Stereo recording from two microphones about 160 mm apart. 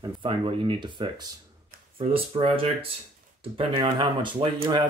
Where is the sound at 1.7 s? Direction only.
65° right (ahead or behind).